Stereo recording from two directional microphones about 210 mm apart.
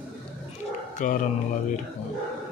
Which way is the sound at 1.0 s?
35° left (ahead or behind).